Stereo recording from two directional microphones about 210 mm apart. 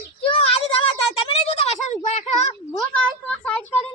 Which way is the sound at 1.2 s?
30° left (ahead or behind).